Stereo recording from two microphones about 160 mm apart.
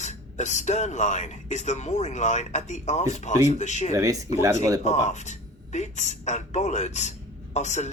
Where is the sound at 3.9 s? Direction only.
20° right (ahead or behind).